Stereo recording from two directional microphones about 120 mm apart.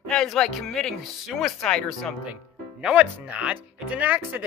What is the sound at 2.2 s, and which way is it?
Speech, 10° right (ahead or behind).